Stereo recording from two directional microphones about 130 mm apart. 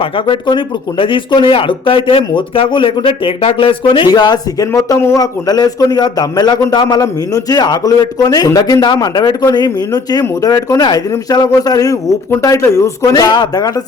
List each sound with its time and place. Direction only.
0.0 s speech: 40° left (ahead or behind)